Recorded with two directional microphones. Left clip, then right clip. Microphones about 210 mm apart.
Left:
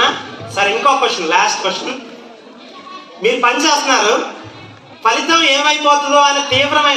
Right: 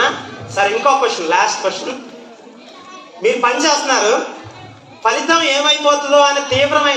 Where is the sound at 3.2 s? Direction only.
45° left (ahead or behind).